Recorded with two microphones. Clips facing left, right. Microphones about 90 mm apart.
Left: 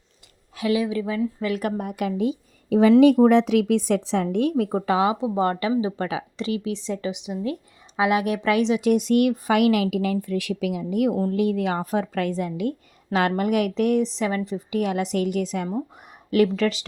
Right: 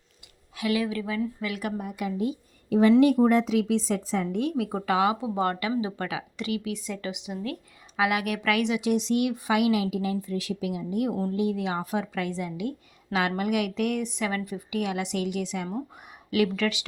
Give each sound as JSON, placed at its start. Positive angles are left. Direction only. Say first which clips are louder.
{"t": 0.5, "sound": "a woman's voice", "louder": "left 4 dB", "side_deg": 30}
{"t": 1.8, "sound": "a woman's voice", "louder": "left 5 dB", "side_deg": 65}
{"t": 4.7, "sound": "speech", "louder": "left 3 dB", "side_deg": 30}
{"t": 8.8, "sound": "speech", "louder": "left 6 dB", "side_deg": 50}
{"t": 11.3, "sound": "a woman's voice", "louder": "left 5 dB", "side_deg": 60}